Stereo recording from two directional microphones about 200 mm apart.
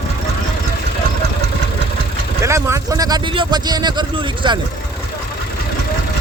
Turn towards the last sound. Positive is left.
turn(degrees=-20)  # may be behind; listen again after turning